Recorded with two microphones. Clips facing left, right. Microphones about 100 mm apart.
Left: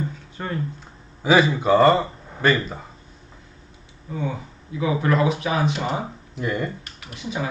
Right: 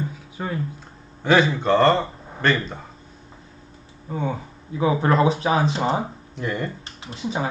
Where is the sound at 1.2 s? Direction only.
5° left (ahead or behind).